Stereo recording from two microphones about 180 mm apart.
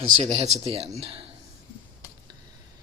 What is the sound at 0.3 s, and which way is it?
Speech, 35° right (ahead or behind).